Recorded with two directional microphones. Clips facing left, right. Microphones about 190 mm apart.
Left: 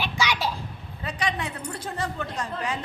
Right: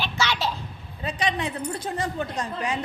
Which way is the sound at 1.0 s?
20° right (ahead or behind).